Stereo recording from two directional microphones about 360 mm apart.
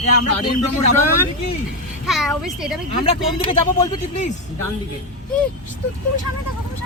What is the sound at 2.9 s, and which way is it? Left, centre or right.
Speech, centre.